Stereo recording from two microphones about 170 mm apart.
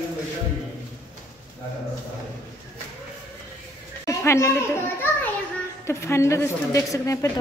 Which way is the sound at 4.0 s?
15° left (ahead or behind).